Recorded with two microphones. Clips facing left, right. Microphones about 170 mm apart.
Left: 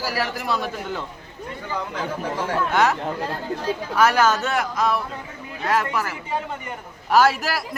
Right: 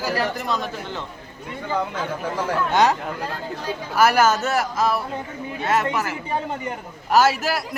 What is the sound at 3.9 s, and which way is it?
A man's voice, 5° right (ahead or behind).